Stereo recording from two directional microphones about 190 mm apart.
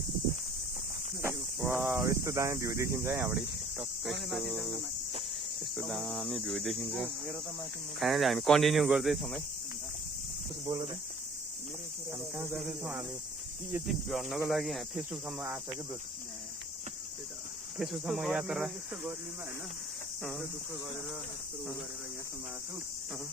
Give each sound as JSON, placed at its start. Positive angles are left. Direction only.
{"t": 1.6, "sound": "speech", "side_deg": -10}
{"t": 10.7, "sound": "speech", "side_deg": -30}
{"t": 12.4, "sound": "speech", "side_deg": -10}
{"t": 17.7, "sound": "speech", "side_deg": 0}
{"t": 20.2, "sound": "speech", "side_deg": 0}